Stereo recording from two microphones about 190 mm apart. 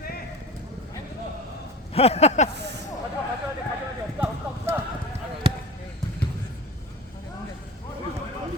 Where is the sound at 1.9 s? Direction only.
35° left (ahead or behind).